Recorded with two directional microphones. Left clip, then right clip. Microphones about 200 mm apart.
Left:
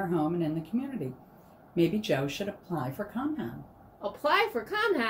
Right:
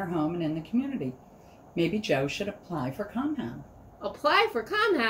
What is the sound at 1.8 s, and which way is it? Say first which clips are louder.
Speech: right 1 dB; 15° left (ahead or behind).